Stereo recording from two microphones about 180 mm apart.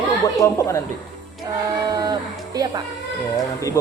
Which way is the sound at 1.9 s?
20° right (ahead or behind).